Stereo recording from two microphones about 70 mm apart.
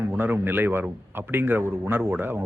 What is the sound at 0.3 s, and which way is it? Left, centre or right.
A man's voice, right.